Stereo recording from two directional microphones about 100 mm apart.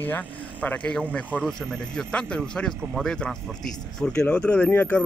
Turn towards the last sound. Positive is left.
turn(degrees=15)  # may be behind; listen again after turning